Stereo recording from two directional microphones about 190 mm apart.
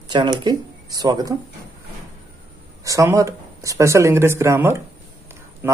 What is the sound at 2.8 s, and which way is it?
Speech, 15° right (ahead or behind).